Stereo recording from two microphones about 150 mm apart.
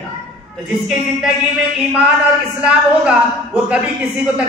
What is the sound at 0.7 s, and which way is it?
Speech, centre (ahead or behind).